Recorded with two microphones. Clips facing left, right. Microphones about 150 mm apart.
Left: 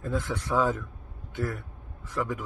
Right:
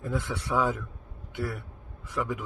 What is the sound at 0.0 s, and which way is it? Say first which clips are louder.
Speech: left 1 dB; 10° right (ahead or behind).